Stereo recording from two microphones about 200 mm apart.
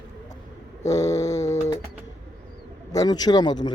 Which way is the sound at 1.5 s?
35° left (ahead or behind).